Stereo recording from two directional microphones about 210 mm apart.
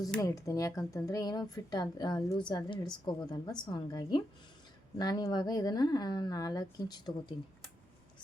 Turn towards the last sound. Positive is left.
turn(degrees=20)  # may be behind; listen again after turning